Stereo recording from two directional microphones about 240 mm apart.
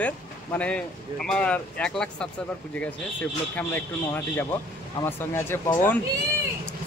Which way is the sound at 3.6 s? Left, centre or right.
Centre.